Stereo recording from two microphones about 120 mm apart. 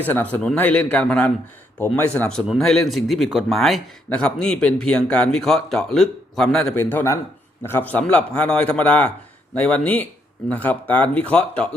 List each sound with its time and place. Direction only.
0.0 s a man's voice: 15° left (ahead or behind)
6.7 s a man's voice: 15° left (ahead or behind)